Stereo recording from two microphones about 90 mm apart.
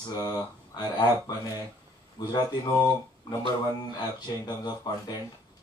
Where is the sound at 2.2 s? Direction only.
50° left (ahead or behind).